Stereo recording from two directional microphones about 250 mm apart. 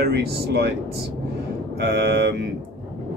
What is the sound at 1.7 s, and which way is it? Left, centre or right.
Speech, right.